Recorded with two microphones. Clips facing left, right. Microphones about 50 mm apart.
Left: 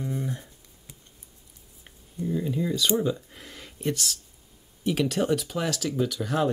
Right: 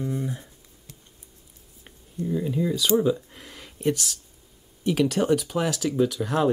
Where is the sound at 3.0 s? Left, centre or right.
Centre.